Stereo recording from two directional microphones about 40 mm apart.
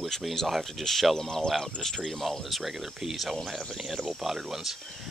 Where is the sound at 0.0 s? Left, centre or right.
Centre.